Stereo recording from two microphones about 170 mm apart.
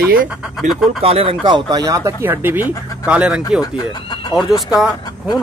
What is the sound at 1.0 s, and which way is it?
Speech, 35° right (ahead or behind).